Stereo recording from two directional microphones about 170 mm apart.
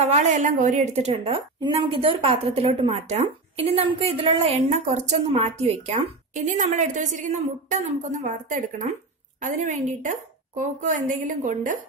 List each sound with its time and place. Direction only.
0.0 s a woman's voice: 40° right (ahead or behind)